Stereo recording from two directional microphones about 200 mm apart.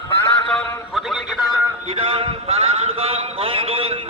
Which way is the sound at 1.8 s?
30° right (ahead or behind).